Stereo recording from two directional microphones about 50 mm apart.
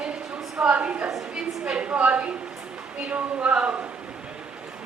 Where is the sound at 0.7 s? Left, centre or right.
Right.